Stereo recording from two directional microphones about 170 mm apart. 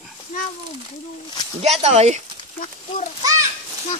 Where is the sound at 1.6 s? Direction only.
40° right (ahead or behind).